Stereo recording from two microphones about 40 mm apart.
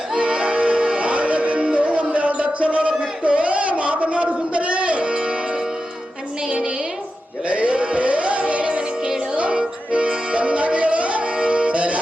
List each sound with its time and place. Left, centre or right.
0.2 s music: right
7.4 s music: right